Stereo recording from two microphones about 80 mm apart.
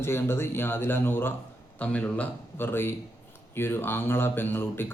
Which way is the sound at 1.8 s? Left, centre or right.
Centre.